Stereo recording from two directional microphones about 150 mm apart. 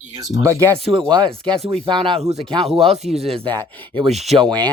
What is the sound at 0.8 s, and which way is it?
Speech, 35° right (ahead or behind).